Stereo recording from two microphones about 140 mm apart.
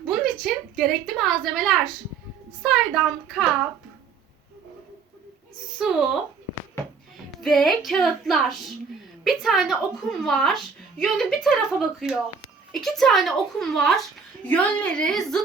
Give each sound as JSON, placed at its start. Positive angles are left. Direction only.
{"t": 0.1, "sound": "a woman's voice", "side_deg": 0}
{"t": 5.8, "sound": "a woman's voice", "side_deg": -5}
{"t": 7.3, "sound": "music", "side_deg": 0}
{"t": 7.9, "sound": "a woman's voice", "side_deg": 0}